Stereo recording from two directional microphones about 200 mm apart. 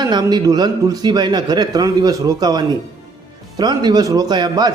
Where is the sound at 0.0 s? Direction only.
20° right (ahead or behind).